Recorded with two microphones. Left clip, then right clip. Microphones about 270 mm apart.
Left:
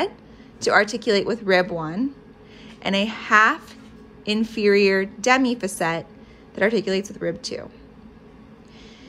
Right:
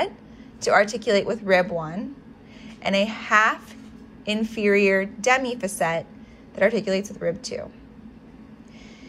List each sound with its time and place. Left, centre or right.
0.6 s a woman's voice: centre